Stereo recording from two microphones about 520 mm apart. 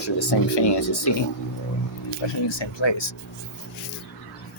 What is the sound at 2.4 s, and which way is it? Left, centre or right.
Speech, left.